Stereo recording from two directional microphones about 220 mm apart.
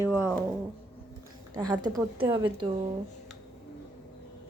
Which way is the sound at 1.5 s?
20° right (ahead or behind).